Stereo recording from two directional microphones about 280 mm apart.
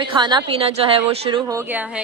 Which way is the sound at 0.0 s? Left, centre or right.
Centre.